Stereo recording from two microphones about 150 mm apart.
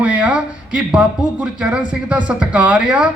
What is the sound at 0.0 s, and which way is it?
Speech, 10° right (ahead or behind).